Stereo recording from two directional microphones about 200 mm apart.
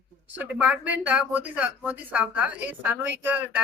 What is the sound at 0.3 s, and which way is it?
Speech, 5° right (ahead or behind).